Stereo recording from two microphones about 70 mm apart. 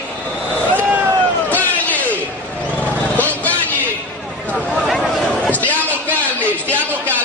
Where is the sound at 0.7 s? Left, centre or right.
Right.